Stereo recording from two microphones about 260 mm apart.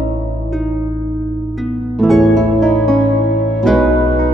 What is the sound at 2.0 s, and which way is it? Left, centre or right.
Music, centre.